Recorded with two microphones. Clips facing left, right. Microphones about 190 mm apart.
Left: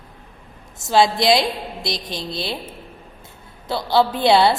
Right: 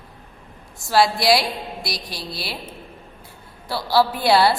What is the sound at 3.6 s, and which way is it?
Speech, 20° left (ahead or behind).